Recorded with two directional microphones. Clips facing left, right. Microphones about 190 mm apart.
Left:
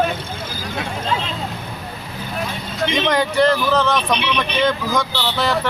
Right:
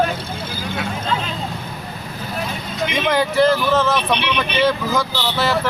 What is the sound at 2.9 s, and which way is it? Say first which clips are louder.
Speech: even; centre (ahead or behind).